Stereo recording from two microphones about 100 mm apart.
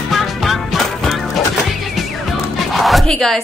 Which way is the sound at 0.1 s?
Centre (ahead or behind).